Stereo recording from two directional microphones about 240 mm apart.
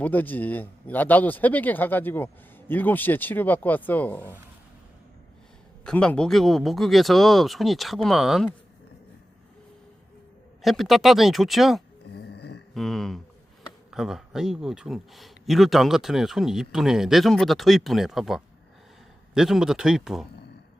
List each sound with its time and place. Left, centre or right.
0.0 s speech: centre
5.8 s speech: centre
10.6 s speech: centre
12.1 s a sound: left
12.7 s speech: centre